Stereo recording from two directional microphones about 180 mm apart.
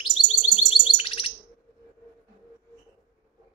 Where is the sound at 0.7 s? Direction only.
30° left (ahead or behind).